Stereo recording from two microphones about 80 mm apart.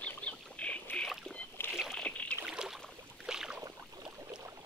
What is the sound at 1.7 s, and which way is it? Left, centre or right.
Rowboat, centre.